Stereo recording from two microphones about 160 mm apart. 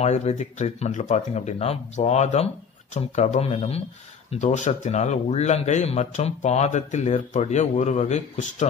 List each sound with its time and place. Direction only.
0.0 s speech: 40° left (ahead or behind)